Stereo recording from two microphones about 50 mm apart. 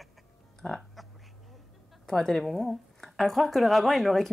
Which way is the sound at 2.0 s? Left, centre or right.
Centre.